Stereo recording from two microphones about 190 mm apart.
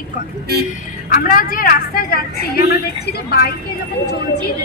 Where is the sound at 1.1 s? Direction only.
45° left (ahead or behind).